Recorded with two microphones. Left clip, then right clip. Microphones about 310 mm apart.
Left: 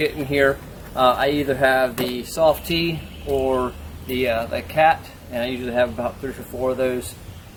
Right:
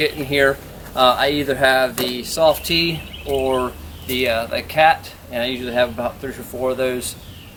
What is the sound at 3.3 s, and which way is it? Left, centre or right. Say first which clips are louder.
Speech: right 1 dB; left.